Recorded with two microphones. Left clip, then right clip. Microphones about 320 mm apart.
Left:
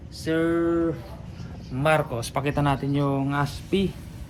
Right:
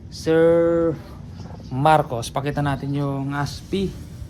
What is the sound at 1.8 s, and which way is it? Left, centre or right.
Speech, centre.